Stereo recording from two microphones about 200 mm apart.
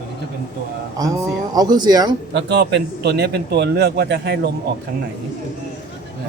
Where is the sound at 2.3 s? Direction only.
55° right (ahead or behind).